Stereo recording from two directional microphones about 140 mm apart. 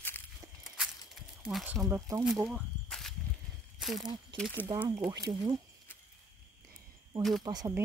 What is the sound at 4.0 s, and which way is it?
Speech, 30° right (ahead or behind).